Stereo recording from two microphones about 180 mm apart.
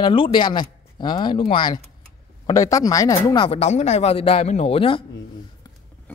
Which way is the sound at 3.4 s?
35° left (ahead or behind).